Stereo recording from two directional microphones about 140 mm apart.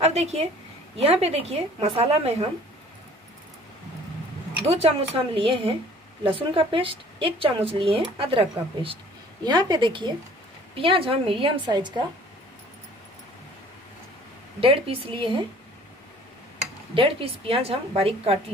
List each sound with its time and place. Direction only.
0.0 s a woman's voice: 50° right (ahead or behind)
4.6 s a woman's voice: 45° right (ahead or behind)
14.6 s speech: 40° right (ahead or behind)
16.9 s a woman's voice: 40° right (ahead or behind)